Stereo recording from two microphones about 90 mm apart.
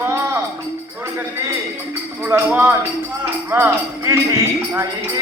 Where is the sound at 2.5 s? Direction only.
20° right (ahead or behind).